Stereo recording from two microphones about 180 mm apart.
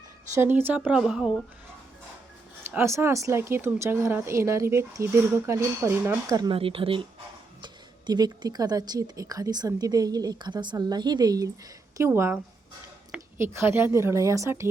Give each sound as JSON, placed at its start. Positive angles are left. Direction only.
{"t": 0.3, "sound": "a woman's voice", "side_deg": -10}
{"t": 2.6, "sound": "speech", "side_deg": -15}